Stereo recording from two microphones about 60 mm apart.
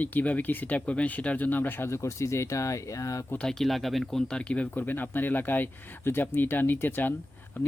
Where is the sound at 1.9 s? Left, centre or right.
Left.